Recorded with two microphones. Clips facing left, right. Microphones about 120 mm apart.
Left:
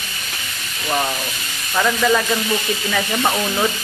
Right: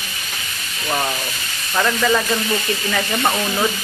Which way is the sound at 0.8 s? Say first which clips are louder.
Left 1 dB; centre (ahead or behind).